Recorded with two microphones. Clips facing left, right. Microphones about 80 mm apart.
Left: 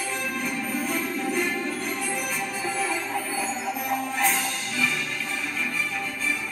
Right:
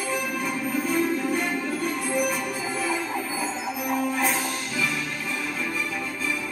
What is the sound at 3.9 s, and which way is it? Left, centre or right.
Music, centre.